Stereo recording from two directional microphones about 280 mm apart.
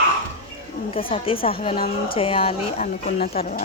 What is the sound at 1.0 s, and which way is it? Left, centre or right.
A woman's voice, left.